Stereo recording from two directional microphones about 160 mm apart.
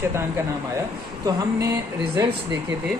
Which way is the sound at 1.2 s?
20° right (ahead or behind).